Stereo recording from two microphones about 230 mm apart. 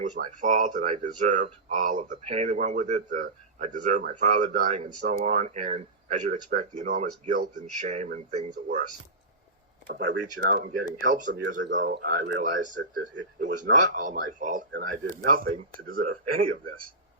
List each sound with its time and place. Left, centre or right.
0.0 s speech: right
9.8 s speech: right
12.4 s speech: right
13.0 s speech: right
13.9 s speech: right
15.0 s speech: right
15.3 s speech: right